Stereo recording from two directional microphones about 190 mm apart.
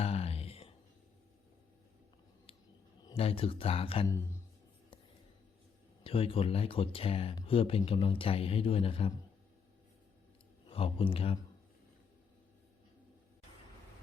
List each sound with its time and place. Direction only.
0.0 s a sound: 30° left (ahead or behind)
3.0 s speech: 25° left (ahead or behind)
6.0 s speech: 30° left (ahead or behind)
10.7 s speech: 30° left (ahead or behind)